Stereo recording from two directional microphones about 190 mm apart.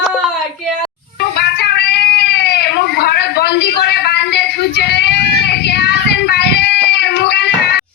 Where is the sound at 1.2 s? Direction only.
60° left (ahead or behind).